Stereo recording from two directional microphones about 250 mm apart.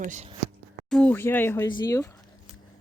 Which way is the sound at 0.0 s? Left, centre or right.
Right.